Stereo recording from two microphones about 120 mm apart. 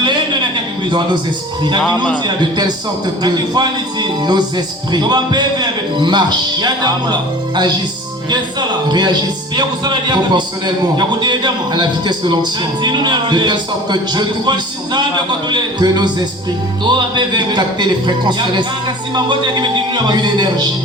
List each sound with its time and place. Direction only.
0.0 s a sound: 40° right (ahead or behind)
2.2 s a man's voice: 35° right (ahead or behind)
8.9 s a man's voice: 35° right (ahead or behind)